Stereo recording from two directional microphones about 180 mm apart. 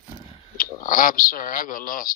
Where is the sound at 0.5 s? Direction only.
50° left (ahead or behind).